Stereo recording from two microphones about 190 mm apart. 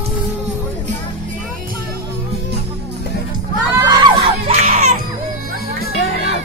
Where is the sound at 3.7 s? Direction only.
20° right (ahead or behind).